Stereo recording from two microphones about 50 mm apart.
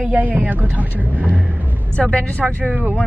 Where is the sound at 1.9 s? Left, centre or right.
Left.